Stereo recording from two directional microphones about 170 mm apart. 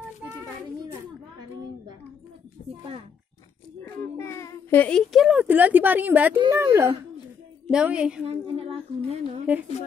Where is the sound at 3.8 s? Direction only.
15° left (ahead or behind); by 8.3 s 5° right (ahead or behind).